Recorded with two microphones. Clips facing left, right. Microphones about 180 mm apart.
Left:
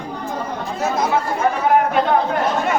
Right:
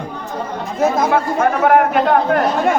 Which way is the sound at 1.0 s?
60° right (ahead or behind).